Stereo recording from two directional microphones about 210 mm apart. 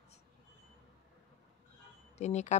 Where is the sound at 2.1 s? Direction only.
35° left (ahead or behind).